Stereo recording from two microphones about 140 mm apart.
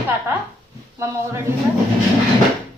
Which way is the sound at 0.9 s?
20° right (ahead or behind).